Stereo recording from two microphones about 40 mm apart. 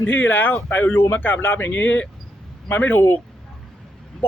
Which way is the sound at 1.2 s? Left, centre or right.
Left.